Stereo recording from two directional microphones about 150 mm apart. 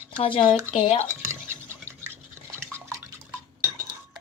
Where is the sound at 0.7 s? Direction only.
35° left (ahead or behind).